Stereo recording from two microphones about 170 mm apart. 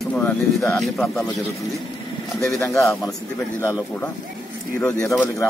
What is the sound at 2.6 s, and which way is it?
Speech, 15° left (ahead or behind).